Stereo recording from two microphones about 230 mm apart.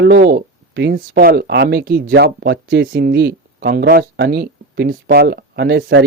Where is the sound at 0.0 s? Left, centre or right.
Right.